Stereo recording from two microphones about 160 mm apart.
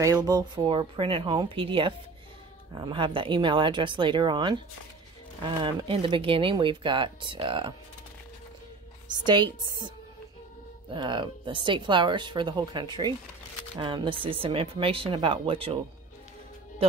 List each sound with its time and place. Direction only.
0.0 s speech: 20° right (ahead or behind)
9.1 s speech: 30° right (ahead or behind)